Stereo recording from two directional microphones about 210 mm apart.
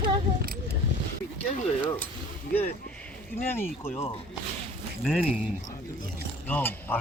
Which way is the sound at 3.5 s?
10° left (ahead or behind).